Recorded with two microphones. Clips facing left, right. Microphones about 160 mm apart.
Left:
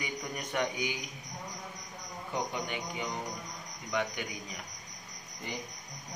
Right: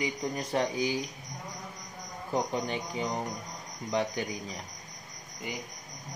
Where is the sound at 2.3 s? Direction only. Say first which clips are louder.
Right 5 dB; 35° right (ahead or behind).